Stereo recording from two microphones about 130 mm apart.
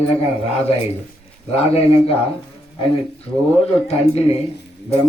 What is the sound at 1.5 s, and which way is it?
Speech, 50° left (ahead or behind).